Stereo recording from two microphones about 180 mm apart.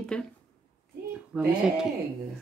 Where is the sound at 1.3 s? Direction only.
5° right (ahead or behind).